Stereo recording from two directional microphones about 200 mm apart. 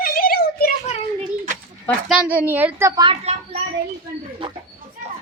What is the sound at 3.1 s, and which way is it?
Speech, 30° right (ahead or behind).